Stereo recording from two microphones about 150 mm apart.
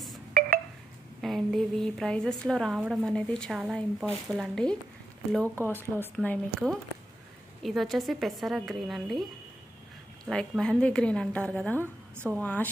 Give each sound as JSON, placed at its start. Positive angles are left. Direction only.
{"t": 0.3, "sound": "a sound", "side_deg": -75}
{"t": 1.2, "sound": "a woman's voice", "side_deg": 0}
{"t": 10.2, "sound": "a woman's voice", "side_deg": 0}
{"t": 11.8, "sound": "a woman's voice", "side_deg": -15}
{"t": 12.4, "sound": "a woman's voice", "side_deg": 10}